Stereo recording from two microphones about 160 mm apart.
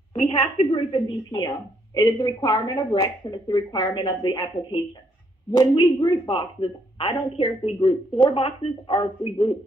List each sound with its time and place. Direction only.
0.1 s a woman's voice: 40° left (ahead or behind)
0.7 s speech: 30° left (ahead or behind)